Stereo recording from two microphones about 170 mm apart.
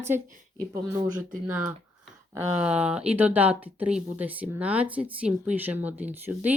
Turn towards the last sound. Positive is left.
turn(degrees=-10)  # may be behind; listen again after turning